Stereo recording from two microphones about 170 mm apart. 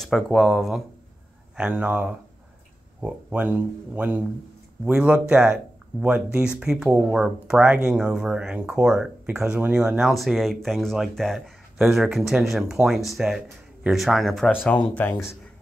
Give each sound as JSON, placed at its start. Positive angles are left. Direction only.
{"t": 0.0, "sound": "speech", "side_deg": 0}